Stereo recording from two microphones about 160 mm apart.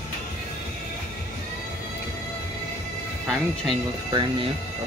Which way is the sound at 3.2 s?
Centre (ahead or behind).